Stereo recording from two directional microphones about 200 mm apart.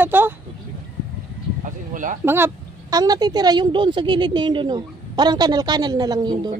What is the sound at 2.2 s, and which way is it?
A woman's voice, 10° right (ahead or behind).